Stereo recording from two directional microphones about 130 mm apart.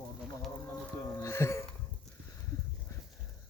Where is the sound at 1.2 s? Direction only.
20° left (ahead or behind).